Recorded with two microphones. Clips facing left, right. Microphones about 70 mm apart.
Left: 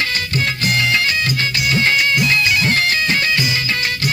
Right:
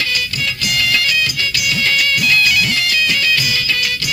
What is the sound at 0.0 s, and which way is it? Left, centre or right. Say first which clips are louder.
Music: left 1 dB; left.